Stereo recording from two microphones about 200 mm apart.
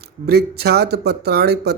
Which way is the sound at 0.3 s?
55° right (ahead or behind).